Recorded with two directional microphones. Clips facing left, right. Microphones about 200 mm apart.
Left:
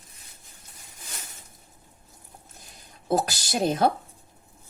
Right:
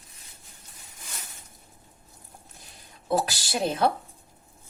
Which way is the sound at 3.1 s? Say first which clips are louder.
Left 1 dB; 45° left (ahead or behind).